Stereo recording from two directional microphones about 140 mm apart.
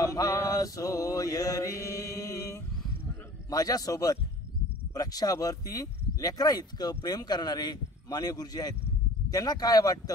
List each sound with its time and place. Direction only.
0.0 s mantra: 25° left (ahead or behind)
3.4 s speech: 25° left (ahead or behind)